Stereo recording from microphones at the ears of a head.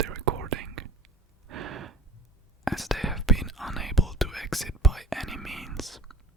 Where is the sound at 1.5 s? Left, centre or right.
Right.